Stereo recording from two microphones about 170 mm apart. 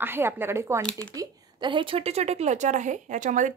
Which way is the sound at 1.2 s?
30° right (ahead or behind).